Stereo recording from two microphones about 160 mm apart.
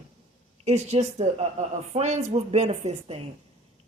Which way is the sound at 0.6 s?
45° right (ahead or behind).